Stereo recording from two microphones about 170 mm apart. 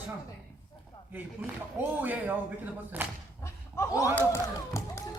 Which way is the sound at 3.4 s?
15° left (ahead or behind).